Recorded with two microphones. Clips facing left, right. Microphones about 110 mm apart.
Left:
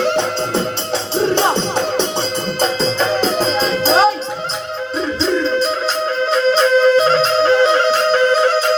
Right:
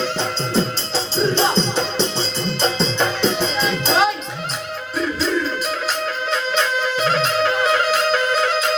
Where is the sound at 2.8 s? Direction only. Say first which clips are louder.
Left 3 dB; 40° left (ahead or behind).